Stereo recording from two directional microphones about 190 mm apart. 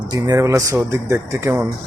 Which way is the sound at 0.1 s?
20° right (ahead or behind).